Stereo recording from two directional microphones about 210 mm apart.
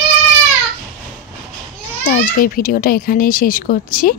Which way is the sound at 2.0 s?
40° left (ahead or behind).